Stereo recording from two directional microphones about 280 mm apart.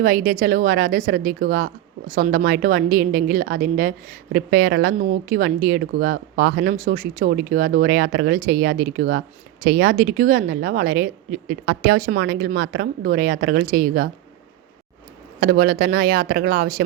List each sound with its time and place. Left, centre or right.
0.0 s a woman's voice: right
15.4 s a woman's voice: right